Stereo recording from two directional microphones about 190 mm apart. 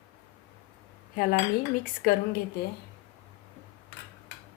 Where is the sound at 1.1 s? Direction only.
50° left (ahead or behind).